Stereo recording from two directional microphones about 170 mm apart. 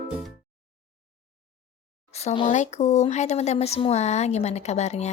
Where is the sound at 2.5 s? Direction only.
45° left (ahead or behind).